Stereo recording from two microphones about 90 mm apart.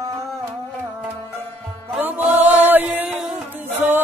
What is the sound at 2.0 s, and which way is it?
Chant, 20° right (ahead or behind).